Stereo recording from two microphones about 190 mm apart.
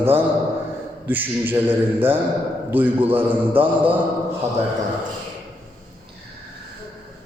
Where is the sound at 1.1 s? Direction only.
10° right (ahead or behind).